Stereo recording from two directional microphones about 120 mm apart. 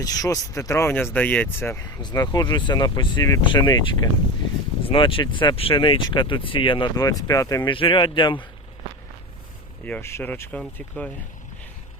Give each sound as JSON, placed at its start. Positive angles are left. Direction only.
{"t": 0.0, "sound": "speech", "side_deg": 30}
{"t": 2.0, "sound": "speech", "side_deg": 35}
{"t": 3.4, "sound": "speech", "side_deg": 40}
{"t": 6.9, "sound": "speech", "side_deg": 30}
{"t": 7.7, "sound": "speech", "side_deg": 45}
{"t": 9.8, "sound": "speech", "side_deg": 15}